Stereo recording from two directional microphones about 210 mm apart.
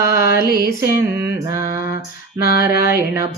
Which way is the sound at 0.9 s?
15° right (ahead or behind).